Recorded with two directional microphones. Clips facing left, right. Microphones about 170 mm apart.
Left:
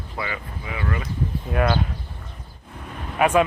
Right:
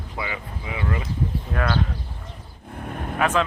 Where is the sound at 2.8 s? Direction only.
50° right (ahead or behind).